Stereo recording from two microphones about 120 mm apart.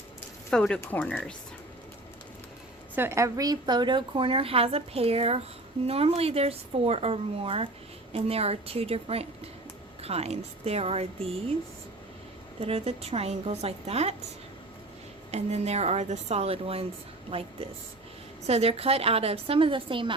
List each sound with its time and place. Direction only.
0.5 s speech: 5° left (ahead or behind)
0.8 s speech: 15° left (ahead or behind)
2.9 s a woman's voice: 20° right (ahead or behind); by 11.5 s 55° right (ahead or behind)
12.5 s speech: 55° right (ahead or behind)
15.3 s a woman's voice: 65° right (ahead or behind); by 20.1 s 45° right (ahead or behind)